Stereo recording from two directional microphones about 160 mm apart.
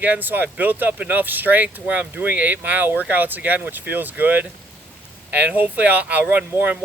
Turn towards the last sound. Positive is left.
turn(degrees=-10)  # may be behind; listen again after turning